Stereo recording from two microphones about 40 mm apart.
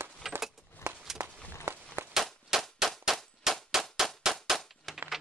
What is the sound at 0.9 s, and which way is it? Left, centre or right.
Walk, right.